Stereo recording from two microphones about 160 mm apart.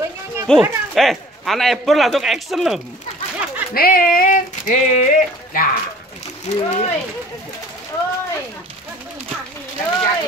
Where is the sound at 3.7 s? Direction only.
65° left (ahead or behind).